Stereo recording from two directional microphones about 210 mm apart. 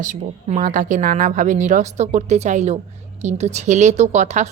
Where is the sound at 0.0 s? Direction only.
35° right (ahead or behind).